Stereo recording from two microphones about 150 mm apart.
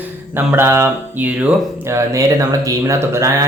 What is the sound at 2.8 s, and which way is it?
Speech, 20° right (ahead or behind).